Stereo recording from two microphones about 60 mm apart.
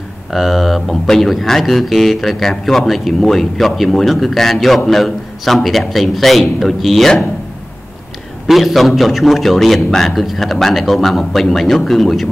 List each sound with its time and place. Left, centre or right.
0.3 s speech: centre
8.5 s speech: centre